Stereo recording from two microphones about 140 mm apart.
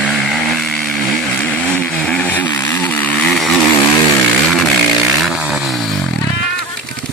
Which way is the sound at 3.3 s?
Centre (ahead or behind).